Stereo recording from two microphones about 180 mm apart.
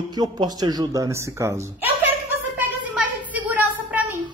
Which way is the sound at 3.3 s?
10° right (ahead or behind).